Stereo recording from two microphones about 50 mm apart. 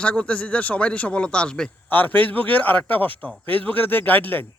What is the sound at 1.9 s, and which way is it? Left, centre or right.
A man's voice, left.